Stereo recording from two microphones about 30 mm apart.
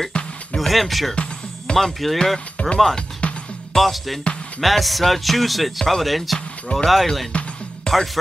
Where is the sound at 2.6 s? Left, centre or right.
Left.